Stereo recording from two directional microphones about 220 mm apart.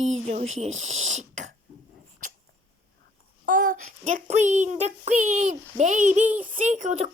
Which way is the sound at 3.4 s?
35° right (ahead or behind).